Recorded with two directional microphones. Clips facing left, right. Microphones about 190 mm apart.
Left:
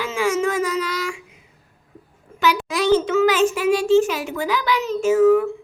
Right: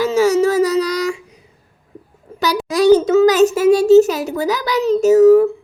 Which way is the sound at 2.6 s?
40° right (ahead or behind).